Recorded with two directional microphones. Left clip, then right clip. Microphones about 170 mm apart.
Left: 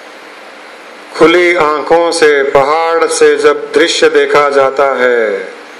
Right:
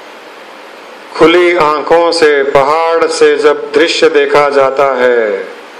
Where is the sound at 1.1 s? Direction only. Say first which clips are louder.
Even; 50° left (ahead or behind).